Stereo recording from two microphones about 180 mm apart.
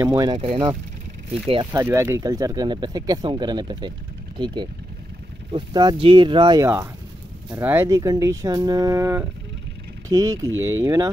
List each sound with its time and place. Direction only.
0.0 s speech: 20° right (ahead or behind)
5.5 s speech: 25° right (ahead or behind)
7.6 s speech: 15° right (ahead or behind)
10.5 s speech: 90° right